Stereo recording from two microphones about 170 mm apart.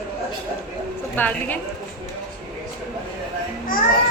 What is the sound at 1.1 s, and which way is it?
Speech, 10° left (ahead or behind).